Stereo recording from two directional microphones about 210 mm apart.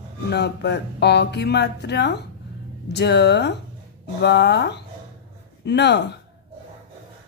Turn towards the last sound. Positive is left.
turn(degrees=55)  # may be behind; listen again after turning